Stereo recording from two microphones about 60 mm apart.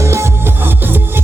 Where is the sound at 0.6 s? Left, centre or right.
Right.